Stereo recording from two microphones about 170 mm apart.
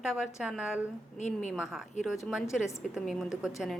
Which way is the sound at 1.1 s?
45° left (ahead or behind).